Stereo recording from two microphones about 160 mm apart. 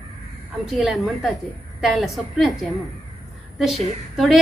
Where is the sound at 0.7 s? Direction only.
Centre (ahead or behind).